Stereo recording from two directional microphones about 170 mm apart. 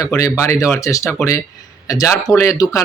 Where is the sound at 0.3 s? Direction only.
20° left (ahead or behind).